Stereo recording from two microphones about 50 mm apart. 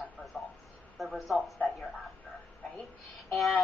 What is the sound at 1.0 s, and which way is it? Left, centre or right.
Speech, centre.